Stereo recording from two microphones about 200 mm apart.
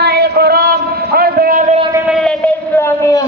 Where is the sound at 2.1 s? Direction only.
5° left (ahead or behind).